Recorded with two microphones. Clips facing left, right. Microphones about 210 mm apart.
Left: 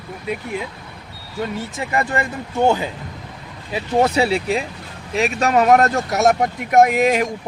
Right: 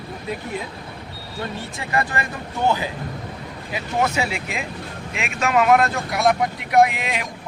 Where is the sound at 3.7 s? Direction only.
35° left (ahead or behind).